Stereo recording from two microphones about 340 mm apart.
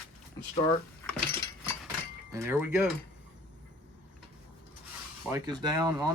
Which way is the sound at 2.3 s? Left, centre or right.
Centre.